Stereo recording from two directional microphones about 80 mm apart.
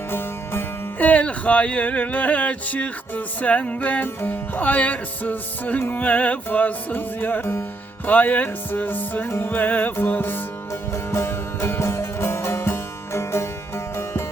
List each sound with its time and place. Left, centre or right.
0.1 s music: left
10.9 s music: left